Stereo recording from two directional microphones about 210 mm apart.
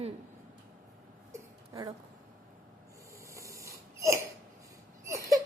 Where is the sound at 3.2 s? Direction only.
15° right (ahead or behind).